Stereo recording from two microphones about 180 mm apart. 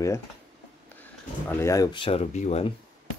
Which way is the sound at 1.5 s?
15° left (ahead or behind).